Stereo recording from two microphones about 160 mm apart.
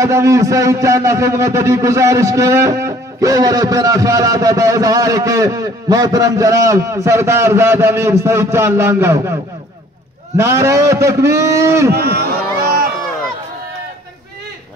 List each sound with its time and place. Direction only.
0.0 s a man's voice: 20° right (ahead or behind)
10.3 s a man's voice: 15° right (ahead or behind)
11.9 s a sound: 85° right